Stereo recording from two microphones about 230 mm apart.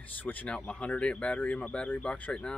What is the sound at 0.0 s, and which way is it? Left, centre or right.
Speech, centre.